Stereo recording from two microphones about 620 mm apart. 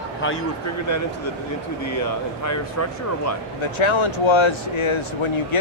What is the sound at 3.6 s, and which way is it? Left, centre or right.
Speech, left.